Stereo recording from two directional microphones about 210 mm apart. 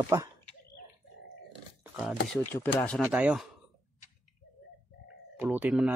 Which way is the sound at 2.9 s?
5° right (ahead or behind).